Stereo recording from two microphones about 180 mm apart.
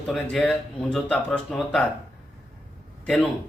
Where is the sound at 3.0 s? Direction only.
Centre (ahead or behind).